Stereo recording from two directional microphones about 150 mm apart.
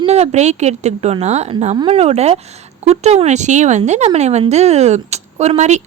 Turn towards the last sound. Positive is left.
turn(degrees=-50)  # may be behind; listen again after turning